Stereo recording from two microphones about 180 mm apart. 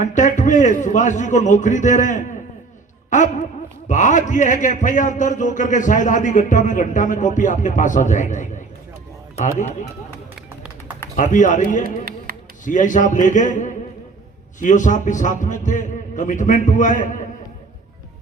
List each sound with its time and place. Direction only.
0.0 s a man's voice: 45° left (ahead or behind)
11.2 s a man's voice: 45° left (ahead or behind)
12.0 s music: 55° right (ahead or behind)
12.6 s a man's voice: 45° left (ahead or behind)